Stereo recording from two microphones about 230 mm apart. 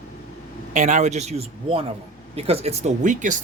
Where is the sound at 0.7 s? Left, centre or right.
Right.